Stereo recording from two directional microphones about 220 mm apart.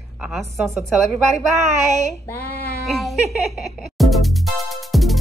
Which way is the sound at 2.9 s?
Centre (ahead or behind).